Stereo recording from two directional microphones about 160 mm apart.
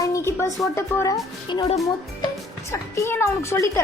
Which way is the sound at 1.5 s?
30° left (ahead or behind).